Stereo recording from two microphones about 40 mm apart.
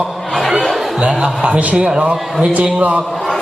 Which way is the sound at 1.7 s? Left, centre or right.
Centre.